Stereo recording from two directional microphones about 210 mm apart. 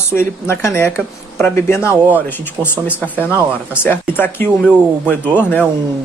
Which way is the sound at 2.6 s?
15° right (ahead or behind).